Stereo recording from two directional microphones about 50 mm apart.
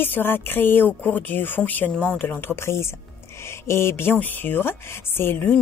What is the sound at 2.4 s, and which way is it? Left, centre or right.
Speech, left.